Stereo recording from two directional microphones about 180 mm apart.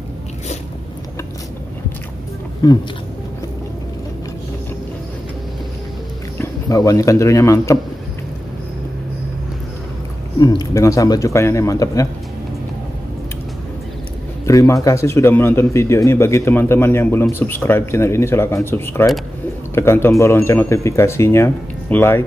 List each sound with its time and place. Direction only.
2.6 s speech: 20° left (ahead or behind)
6.3 s speech: 15° left (ahead or behind)
10.4 s a man's voice: 20° left (ahead or behind)
14.4 s a man's voice: 15° left (ahead or behind)